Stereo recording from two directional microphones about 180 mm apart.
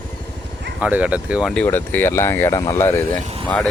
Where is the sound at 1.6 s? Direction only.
10° left (ahead or behind).